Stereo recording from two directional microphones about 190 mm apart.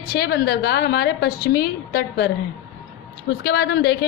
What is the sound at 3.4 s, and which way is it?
Speech, 60° left (ahead or behind).